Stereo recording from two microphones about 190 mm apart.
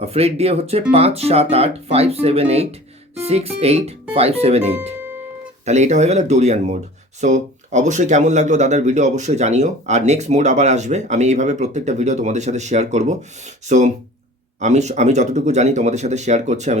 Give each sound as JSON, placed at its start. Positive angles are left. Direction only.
{"t": 0.0, "sound": "speech", "side_deg": -30}